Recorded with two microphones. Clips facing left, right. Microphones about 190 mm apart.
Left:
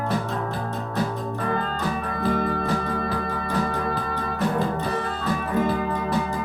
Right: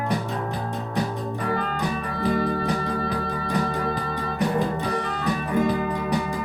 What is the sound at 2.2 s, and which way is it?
Music, 15° right (ahead or behind).